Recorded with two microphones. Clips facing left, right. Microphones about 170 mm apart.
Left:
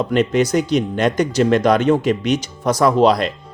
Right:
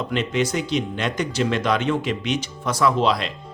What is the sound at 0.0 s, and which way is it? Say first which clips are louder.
Speech: left 7 dB; 45° left (ahead or behind).